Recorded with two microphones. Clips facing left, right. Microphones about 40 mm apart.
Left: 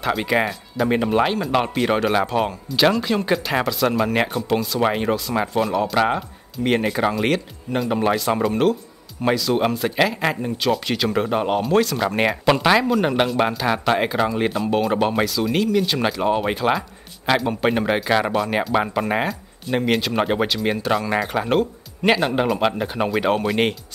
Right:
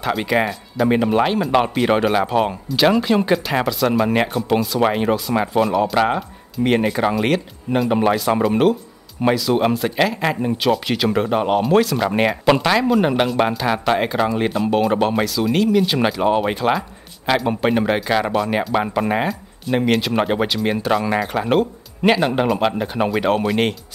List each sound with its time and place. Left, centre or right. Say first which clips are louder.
0.0 s speech: right 1 dB; centre